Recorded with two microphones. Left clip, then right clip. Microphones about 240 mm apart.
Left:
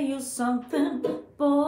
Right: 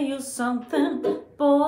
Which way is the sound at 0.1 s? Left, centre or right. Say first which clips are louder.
Right 1 dB; centre.